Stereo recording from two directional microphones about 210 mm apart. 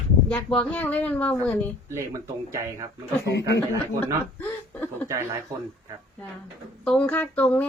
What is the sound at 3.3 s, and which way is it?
Speech, 55° left (ahead or behind).